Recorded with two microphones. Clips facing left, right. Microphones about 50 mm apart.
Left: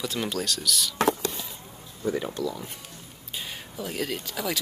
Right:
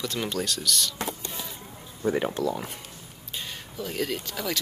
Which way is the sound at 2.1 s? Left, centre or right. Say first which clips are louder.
Right 3 dB; right.